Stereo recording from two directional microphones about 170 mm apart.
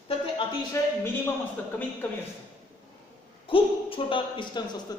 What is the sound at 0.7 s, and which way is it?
Speech, 15° left (ahead or behind).